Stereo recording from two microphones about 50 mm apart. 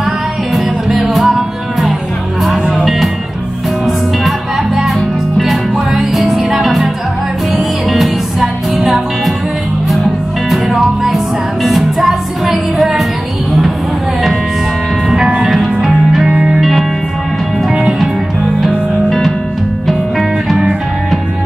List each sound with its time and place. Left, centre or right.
0.6 s music: centre
5.4 s music: centre
10.5 s music: centre
15.2 s music: centre
17.6 s music: centre
19.0 s music: centre